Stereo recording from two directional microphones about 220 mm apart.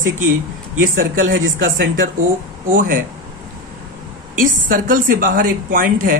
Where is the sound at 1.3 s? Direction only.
60° right (ahead or behind).